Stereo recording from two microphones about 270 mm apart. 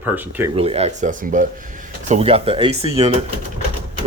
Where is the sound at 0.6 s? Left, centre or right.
Right.